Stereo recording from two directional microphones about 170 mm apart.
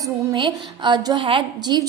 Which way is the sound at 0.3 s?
30° right (ahead or behind).